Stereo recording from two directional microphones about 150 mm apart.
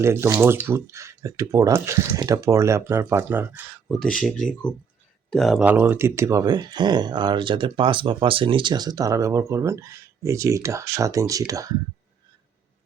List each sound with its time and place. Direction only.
0.0 s speech: 20° right (ahead or behind)
3.8 s speech: 5° left (ahead or behind); by 11.8 s 25° right (ahead or behind)